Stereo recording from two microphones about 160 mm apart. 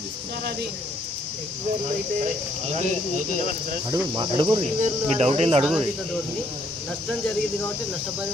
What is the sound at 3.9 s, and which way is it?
Speech, 25° right (ahead or behind).